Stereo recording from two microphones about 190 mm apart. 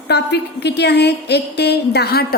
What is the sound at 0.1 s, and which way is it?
A woman's voice, 60° left (ahead or behind).